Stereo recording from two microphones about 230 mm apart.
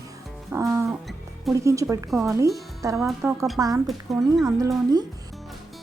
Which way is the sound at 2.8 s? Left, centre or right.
Centre.